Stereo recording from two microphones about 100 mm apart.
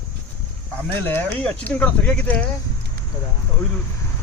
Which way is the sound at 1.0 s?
20° left (ahead or behind).